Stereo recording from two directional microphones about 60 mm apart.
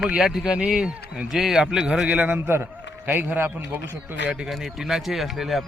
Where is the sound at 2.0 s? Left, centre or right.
Right.